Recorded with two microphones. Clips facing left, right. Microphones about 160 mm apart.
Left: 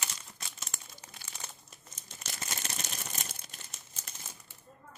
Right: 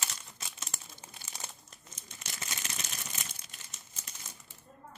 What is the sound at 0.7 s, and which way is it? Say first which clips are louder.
Crumpling: right 1 dB; 40° right (ahead or behind).